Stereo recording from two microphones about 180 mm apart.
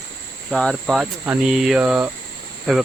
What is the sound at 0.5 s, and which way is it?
Speech, centre (ahead or behind).